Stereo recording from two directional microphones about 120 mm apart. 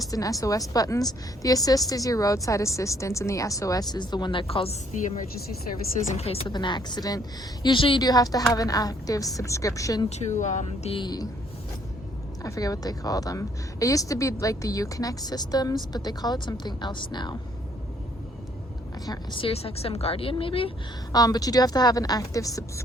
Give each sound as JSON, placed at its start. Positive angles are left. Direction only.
{"t": 0.1, "sound": "a woman's voice", "side_deg": 30}
{"t": 6.1, "sound": "speech", "side_deg": 55}
{"t": 6.5, "sound": "a woman's voice", "side_deg": 40}
{"t": 8.0, "sound": "a woman's voice", "side_deg": 30}
{"t": 10.1, "sound": "speech", "side_deg": 75}
{"t": 10.9, "sound": "a woman's voice", "side_deg": 35}
{"t": 12.4, "sound": "a woman's voice", "side_deg": 30}
{"t": 19.0, "sound": "a woman's voice", "side_deg": 35}
{"t": 19.4, "sound": "speech", "side_deg": 50}
{"t": 21.1, "sound": "a woman's voice", "side_deg": 30}